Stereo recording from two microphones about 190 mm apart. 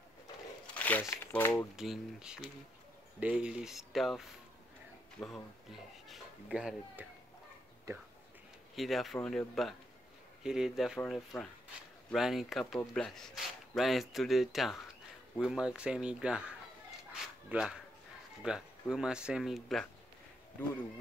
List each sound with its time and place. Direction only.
0.7 s crumpling: 10° left (ahead or behind)
1.1 s speech: 10° left (ahead or behind)
1.8 s speech: 5° right (ahead or behind)
7.9 s speech: 15° right (ahead or behind)
8.7 s speech: centre (ahead or behind)
17.1 s a sound: 5° right (ahead or behind)
18.4 s speech: 5° right (ahead or behind)